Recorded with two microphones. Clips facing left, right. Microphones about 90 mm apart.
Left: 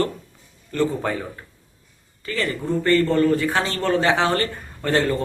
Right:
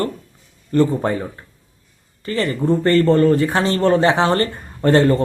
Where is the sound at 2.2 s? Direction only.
35° right (ahead or behind).